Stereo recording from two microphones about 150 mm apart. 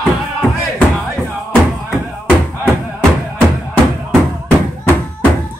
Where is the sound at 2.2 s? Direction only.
5° left (ahead or behind).